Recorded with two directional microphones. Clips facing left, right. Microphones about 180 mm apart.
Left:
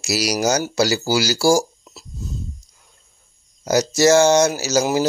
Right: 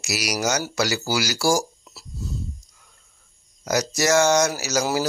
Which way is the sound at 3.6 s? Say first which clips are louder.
Left 7 dB; 25° left (ahead or behind).